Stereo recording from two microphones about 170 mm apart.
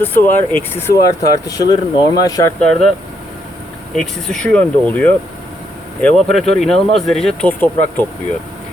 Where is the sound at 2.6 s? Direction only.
5° left (ahead or behind).